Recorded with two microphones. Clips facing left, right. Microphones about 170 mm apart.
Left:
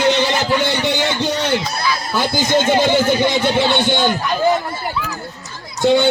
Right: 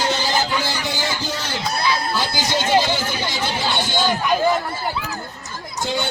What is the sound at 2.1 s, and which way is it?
Speech, 50° left (ahead or behind).